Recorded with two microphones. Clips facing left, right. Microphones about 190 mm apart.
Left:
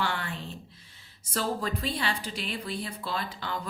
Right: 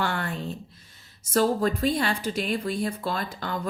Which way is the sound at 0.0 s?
50° right (ahead or behind).